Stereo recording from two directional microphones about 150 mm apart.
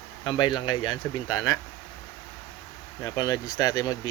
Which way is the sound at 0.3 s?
30° left (ahead or behind).